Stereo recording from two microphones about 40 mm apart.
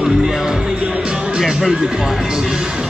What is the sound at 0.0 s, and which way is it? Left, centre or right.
Music, centre.